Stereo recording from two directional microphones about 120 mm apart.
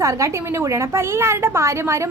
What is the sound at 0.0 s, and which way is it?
A woman's voice, 25° right (ahead or behind).